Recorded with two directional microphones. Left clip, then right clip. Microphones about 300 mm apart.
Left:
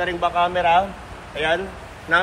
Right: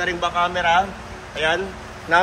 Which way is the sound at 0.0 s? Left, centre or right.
Centre.